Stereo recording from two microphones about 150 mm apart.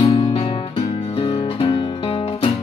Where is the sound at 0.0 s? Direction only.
35° left (ahead or behind).